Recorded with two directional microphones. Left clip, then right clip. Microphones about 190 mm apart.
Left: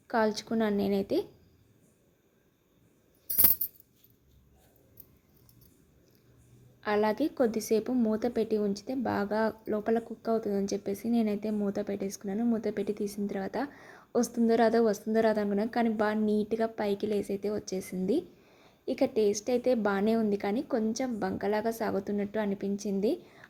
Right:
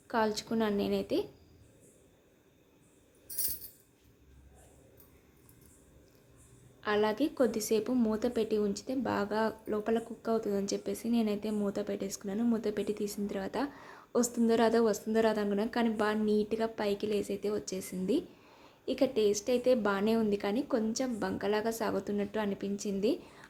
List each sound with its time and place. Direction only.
0.1 s speech: 20° left (ahead or behind)
6.8 s a woman's voice: 20° left (ahead or behind)